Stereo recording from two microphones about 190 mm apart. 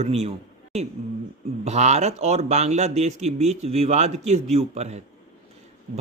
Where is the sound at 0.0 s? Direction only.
35° right (ahead or behind).